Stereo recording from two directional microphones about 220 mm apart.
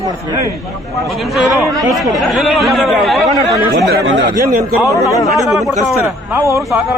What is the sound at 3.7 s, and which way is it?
Speech, 50° right (ahead or behind).